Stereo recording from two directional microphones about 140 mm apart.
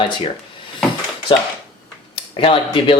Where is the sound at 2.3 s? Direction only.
40° left (ahead or behind).